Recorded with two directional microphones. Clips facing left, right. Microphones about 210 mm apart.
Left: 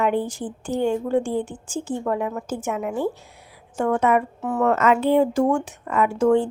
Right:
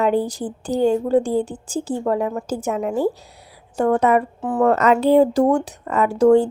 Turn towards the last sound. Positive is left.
turn(degrees=-40)  # may be behind; listen again after turning